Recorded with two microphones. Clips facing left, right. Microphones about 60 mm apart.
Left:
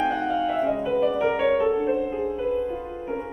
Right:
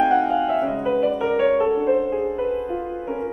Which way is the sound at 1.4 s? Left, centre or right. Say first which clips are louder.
Right 5 dB; centre.